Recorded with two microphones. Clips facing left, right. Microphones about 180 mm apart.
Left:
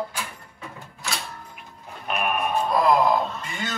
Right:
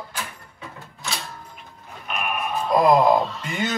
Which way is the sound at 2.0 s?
40° left (ahead or behind).